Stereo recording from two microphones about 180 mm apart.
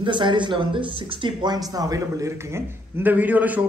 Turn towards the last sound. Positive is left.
turn(degrees=-10)  # may be behind; listen again after turning